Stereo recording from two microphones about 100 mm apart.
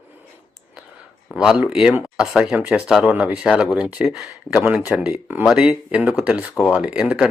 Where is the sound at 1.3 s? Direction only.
5° right (ahead or behind).